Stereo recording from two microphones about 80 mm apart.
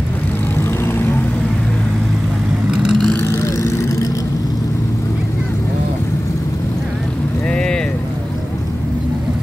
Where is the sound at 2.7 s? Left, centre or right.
Centre.